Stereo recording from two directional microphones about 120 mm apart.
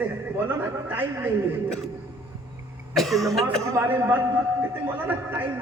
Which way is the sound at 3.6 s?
20° right (ahead or behind).